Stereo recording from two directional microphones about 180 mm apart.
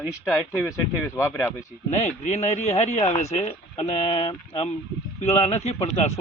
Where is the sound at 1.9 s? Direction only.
40° left (ahead or behind).